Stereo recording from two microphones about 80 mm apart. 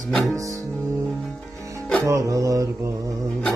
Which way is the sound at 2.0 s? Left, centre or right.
Right.